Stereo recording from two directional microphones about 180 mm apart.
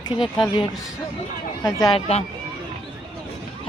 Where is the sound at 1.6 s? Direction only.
20° left (ahead or behind).